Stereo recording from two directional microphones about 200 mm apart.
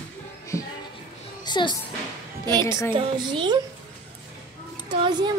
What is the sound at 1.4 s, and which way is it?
Speech, 20° left (ahead or behind).